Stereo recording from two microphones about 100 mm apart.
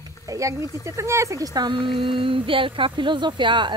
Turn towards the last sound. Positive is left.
turn(degrees=-50)  # may be behind; listen again after turning